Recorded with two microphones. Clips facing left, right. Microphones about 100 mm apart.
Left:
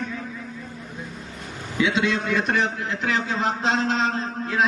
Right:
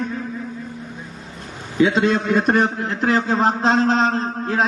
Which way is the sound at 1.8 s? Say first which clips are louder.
Right 6 dB; 40° right (ahead or behind).